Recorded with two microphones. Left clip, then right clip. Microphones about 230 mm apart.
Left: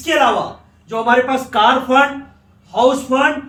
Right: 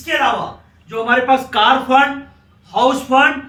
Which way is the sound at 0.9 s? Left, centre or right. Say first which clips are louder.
Even; left.